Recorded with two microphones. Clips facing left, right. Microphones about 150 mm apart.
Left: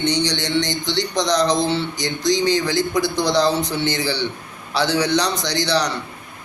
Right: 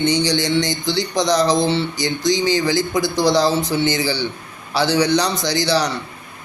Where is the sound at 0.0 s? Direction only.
5° right (ahead or behind).